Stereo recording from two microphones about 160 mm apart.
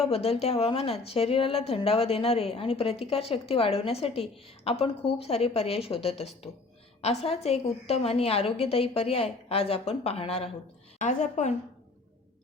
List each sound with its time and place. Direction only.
0.1 s a woman's voice: 40° left (ahead or behind)